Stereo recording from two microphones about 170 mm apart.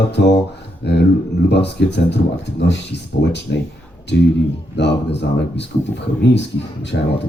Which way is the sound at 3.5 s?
70° left (ahead or behind).